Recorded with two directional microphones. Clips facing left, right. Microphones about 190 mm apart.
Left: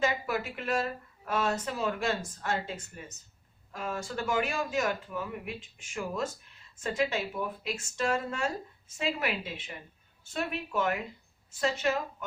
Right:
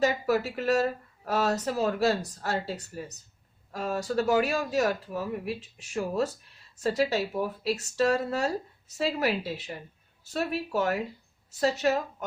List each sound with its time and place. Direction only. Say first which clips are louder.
0.0 s a woman's voice: right 5 dB; 40° right (ahead or behind)